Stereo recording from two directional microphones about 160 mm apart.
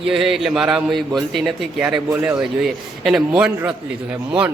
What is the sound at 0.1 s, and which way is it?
A man's voice, centre (ahead or behind).